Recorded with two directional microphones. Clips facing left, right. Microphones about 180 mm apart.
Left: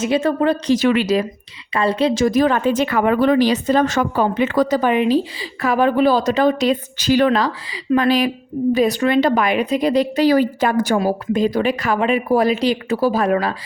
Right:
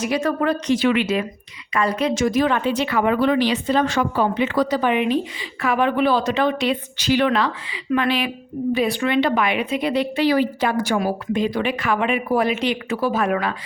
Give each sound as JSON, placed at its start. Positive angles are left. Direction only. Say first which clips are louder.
{"t": 0.0, "sound": "speech", "louder": "left 4 dB", "side_deg": 25}
{"t": 0.8, "sound": "speech", "louder": "left 3 dB", "side_deg": 40}